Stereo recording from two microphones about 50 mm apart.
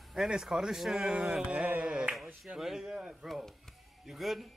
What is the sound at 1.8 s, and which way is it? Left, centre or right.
Speech, centre.